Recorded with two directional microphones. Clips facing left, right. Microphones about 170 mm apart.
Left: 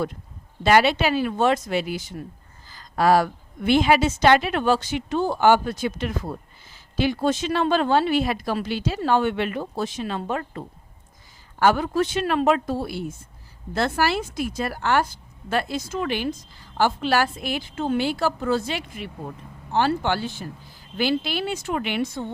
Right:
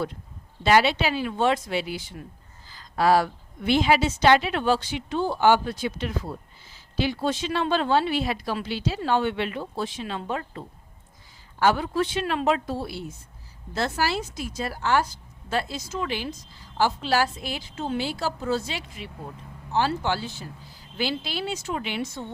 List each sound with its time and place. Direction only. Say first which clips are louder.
0.6 s a woman's voice: left 2 dB; 50° left (ahead or behind)
11.6 s a woman's voice: left 2 dB; 45° left (ahead or behind)